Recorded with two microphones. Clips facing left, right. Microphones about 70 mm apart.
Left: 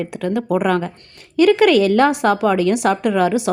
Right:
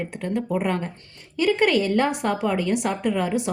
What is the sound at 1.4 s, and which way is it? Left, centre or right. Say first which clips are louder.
A woman's voice: left 8 dB; left.